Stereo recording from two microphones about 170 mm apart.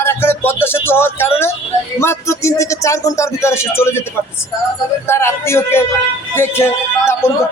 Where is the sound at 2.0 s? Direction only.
15° left (ahead or behind).